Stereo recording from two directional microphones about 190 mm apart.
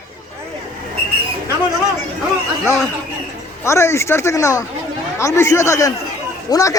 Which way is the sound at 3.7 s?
15° left (ahead or behind).